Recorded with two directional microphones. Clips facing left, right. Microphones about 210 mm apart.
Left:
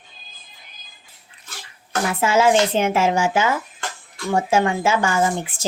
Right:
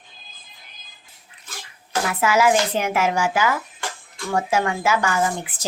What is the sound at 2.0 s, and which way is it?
Speech, 25° left (ahead or behind).